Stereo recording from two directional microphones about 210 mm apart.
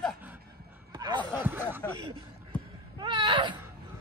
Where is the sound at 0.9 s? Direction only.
20° right (ahead or behind).